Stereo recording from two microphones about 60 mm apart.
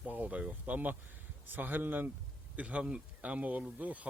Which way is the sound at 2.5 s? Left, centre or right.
Right.